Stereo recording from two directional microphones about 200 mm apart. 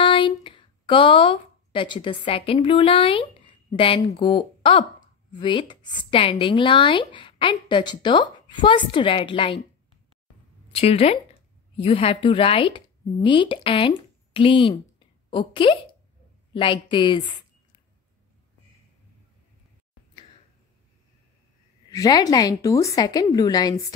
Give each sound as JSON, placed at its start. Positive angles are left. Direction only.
{"t": 0.0, "sound": "speech", "side_deg": 25}
{"t": 10.7, "sound": "speech", "side_deg": 30}
{"t": 21.9, "sound": "speech", "side_deg": 15}